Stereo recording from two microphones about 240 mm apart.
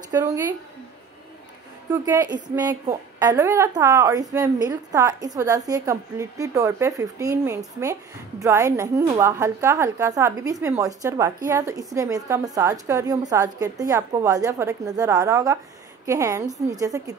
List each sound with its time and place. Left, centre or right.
0.1 s speech: centre
1.9 s a woman's voice: centre